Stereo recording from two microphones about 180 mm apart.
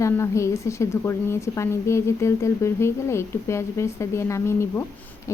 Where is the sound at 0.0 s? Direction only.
15° left (ahead or behind).